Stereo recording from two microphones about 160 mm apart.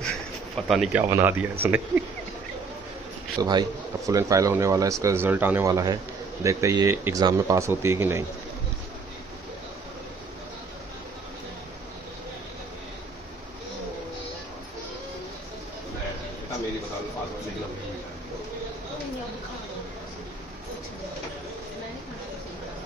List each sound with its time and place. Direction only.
0.6 s speech: centre (ahead or behind)
1.1 s speech: 15° right (ahead or behind)
3.3 s speech: 25° right (ahead or behind)